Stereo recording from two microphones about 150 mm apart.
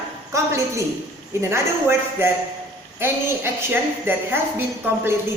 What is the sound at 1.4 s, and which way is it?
A woman's voice, 15° right (ahead or behind).